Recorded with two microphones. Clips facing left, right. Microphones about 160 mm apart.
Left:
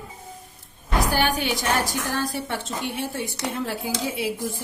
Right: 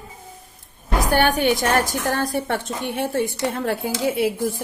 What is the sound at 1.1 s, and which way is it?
A woman's voice, 55° right (ahead or behind).